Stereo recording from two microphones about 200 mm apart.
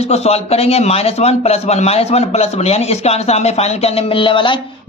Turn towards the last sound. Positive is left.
turn(degrees=25)  # may be behind; listen again after turning